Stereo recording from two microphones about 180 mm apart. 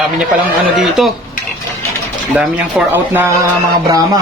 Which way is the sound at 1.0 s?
Centre (ahead or behind).